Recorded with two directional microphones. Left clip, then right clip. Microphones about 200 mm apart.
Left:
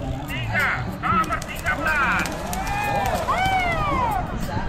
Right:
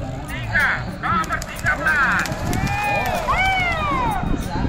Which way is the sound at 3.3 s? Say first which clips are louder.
Right 3 dB; 20° left (ahead or behind).